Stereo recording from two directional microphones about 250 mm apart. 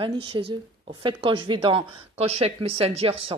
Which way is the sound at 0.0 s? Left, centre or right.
Centre.